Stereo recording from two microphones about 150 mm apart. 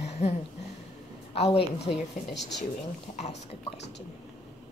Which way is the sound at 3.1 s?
55° left (ahead or behind).